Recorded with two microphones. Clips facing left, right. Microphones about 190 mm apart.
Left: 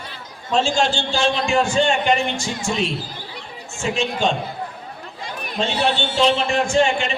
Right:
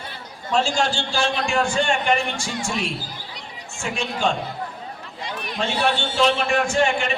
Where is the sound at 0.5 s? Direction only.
25° left (ahead or behind).